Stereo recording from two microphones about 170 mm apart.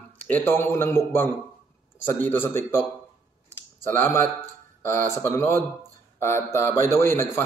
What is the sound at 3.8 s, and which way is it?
Speech, 15° left (ahead or behind).